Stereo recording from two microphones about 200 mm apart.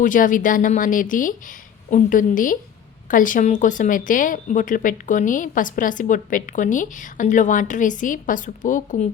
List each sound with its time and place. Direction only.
0.0 s a woman's voice: 40° left (ahead or behind)